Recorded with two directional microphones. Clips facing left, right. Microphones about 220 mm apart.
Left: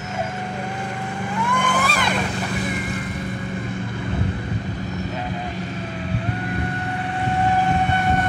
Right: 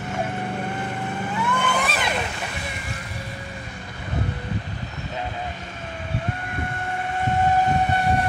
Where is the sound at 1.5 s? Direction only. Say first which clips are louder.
Left 3 dB; 10° left (ahead or behind).